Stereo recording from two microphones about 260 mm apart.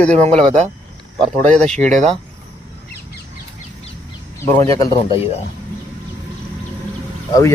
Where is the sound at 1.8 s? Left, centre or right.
Right.